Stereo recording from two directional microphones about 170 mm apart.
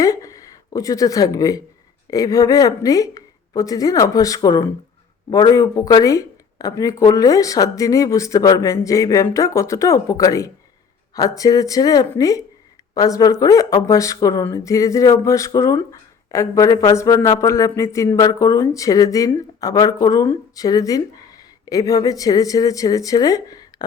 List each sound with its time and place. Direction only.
0.0 s speech: 20° left (ahead or behind)